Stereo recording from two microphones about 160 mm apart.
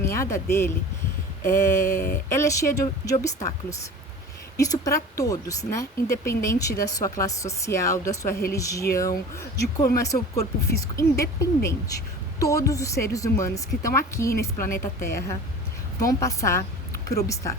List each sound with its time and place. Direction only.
0.0 s speech: 20° left (ahead or behind)
1.7 s a sound: 55° left (ahead or behind)
2.3 s a woman's voice: 20° left (ahead or behind)